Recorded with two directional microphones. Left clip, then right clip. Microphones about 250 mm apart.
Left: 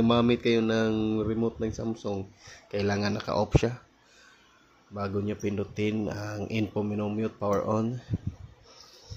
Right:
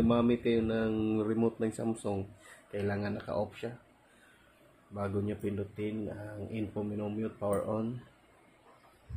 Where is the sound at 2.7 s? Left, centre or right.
Left.